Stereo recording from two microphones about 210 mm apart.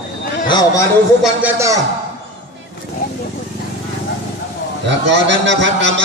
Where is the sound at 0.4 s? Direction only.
20° left (ahead or behind).